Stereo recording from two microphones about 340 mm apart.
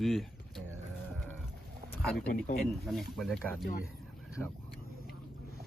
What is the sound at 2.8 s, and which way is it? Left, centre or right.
Speech, centre.